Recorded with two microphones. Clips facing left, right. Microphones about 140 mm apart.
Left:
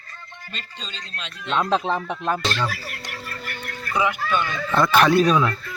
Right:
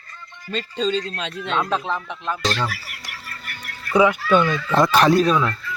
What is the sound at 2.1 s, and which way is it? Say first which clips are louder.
Speech: left 3 dB; 45° left (ahead or behind).